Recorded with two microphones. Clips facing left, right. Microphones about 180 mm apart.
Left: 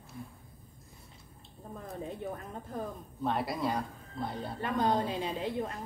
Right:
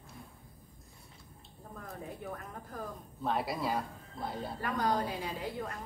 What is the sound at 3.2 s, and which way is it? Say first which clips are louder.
Speech: left 2 dB; centre (ahead or behind).